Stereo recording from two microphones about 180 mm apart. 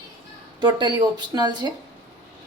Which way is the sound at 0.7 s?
25° right (ahead or behind).